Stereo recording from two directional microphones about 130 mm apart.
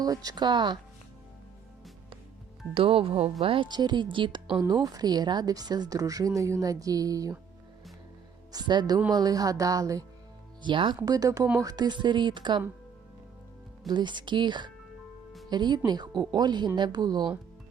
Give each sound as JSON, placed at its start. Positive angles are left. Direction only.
{"t": 0.0, "sound": "a woman's voice", "side_deg": -30}
{"t": 2.7, "sound": "a woman's voice", "side_deg": -45}
{"t": 8.5, "sound": "a woman's voice", "side_deg": -35}
{"t": 10.6, "sound": "a woman's voice", "side_deg": -35}
{"t": 13.8, "sound": "a woman's voice", "side_deg": -35}